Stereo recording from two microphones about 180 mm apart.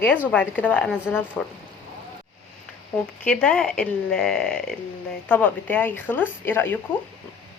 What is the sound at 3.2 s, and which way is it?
A woman's voice, 5° left (ahead or behind).